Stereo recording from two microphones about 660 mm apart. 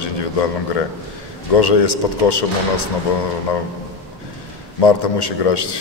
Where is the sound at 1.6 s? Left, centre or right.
Left.